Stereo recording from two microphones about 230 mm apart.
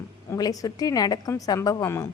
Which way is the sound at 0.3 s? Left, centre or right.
Centre.